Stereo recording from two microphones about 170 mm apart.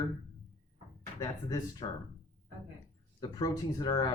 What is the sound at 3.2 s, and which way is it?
Speech, 25° left (ahead or behind).